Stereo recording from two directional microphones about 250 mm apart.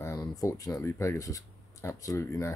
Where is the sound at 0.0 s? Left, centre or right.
Centre.